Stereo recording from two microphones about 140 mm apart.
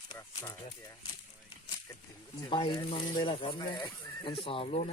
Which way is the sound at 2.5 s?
35° left (ahead or behind).